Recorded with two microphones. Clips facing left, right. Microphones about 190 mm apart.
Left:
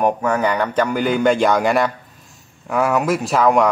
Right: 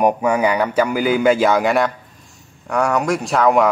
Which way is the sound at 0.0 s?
10° right (ahead or behind).